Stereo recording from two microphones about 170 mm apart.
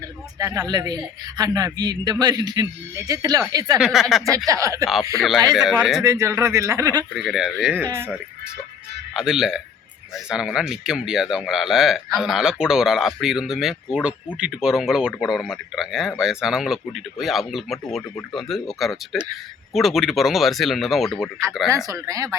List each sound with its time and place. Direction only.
0.3 s a man's voice: 20° right (ahead or behind)
3.8 s speech: centre (ahead or behind)
4.4 s a man's voice: 20° right (ahead or behind)
5.5 s speech: 5° right (ahead or behind)
6.0 s a man's voice: 20° right (ahead or behind)
7.2 s speech: centre (ahead or behind)
7.9 s a man's voice: 20° right (ahead or behind)
9.1 s speech: 5° right (ahead or behind)
21.8 s a man's voice: 20° right (ahead or behind)